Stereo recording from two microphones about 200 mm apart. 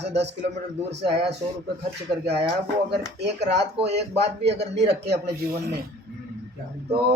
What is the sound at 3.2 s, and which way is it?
A man's voice, 60° right (ahead or behind).